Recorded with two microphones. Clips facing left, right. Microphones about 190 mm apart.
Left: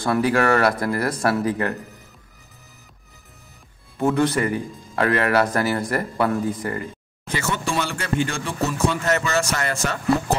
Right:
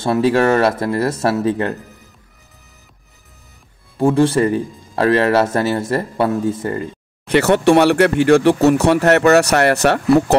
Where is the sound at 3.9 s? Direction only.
30° right (ahead or behind).